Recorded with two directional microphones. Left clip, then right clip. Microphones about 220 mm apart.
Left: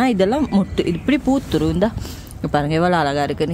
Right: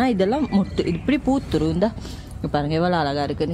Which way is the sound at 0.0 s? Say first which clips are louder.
Left 3 dB; 25° left (ahead or behind).